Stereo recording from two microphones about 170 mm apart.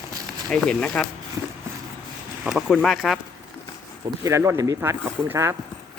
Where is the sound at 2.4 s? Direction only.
5° right (ahead or behind).